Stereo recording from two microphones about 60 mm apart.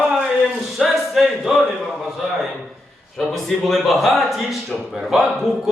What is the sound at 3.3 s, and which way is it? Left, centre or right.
Speech, centre.